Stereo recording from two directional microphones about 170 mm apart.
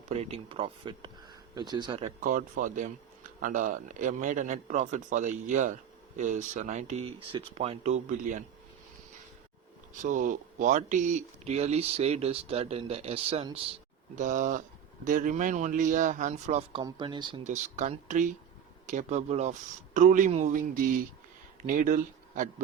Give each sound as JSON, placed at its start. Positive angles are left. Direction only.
{"t": 0.1, "sound": "speech", "side_deg": -35}
{"t": 2.2, "sound": "a man's voice", "side_deg": -50}
{"t": 9.9, "sound": "speech", "side_deg": -50}
{"t": 14.2, "sound": "a man's voice", "side_deg": -50}
{"t": 16.8, "sound": "speech", "side_deg": -25}
{"t": 17.4, "sound": "a man's voice", "side_deg": -45}